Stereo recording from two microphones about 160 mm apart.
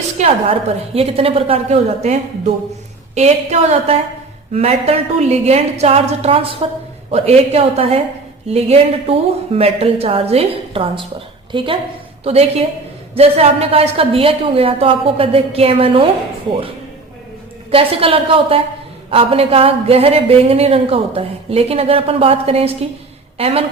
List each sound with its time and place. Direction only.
0.2 s a woman's voice: 40° right (ahead or behind)
17.7 s a woman's voice: 35° right (ahead or behind)